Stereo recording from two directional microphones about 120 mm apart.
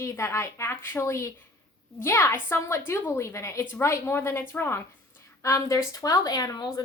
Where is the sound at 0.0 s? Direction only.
25° left (ahead or behind).